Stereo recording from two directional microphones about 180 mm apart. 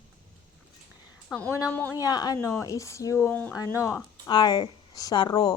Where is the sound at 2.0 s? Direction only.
20° left (ahead or behind).